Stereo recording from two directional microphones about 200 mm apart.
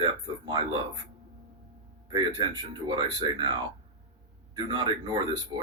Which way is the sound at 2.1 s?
25° right (ahead or behind).